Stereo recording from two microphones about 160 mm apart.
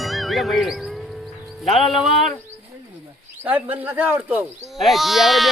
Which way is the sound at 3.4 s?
10° right (ahead or behind).